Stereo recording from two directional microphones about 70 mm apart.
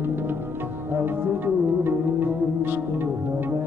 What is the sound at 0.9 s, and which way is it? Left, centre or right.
Music, right.